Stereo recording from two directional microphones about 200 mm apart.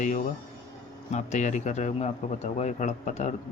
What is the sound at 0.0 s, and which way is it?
Speech, 40° left (ahead or behind).